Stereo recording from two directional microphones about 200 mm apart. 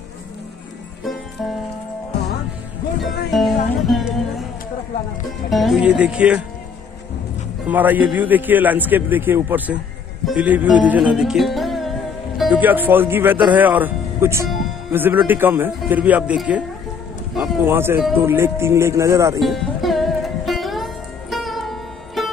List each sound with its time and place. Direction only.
3.0 s speech: centre (ahead or behind)
5.5 s speech: centre (ahead or behind)
7.6 s a man's voice: 10° right (ahead or behind)
19.4 s music: centre (ahead or behind)